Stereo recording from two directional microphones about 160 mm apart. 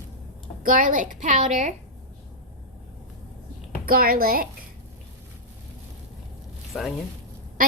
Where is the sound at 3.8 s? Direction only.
65° right (ahead or behind).